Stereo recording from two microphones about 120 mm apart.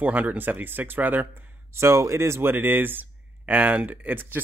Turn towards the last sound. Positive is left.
turn(degrees=-15)  # may be behind; listen again after turning